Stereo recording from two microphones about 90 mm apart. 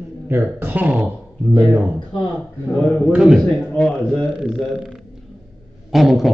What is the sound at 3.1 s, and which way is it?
Speech, 5° right (ahead or behind).